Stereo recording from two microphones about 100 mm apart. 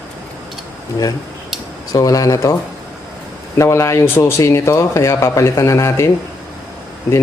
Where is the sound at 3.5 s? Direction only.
30° left (ahead or behind).